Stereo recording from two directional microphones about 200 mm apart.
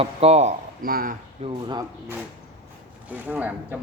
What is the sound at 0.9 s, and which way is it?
Speech, 45° right (ahead or behind).